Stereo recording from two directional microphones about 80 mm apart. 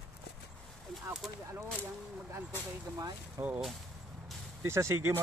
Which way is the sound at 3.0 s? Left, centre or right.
Right.